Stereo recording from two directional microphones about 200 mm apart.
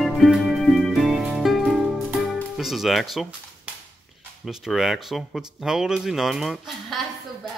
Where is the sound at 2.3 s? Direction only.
Centre (ahead or behind).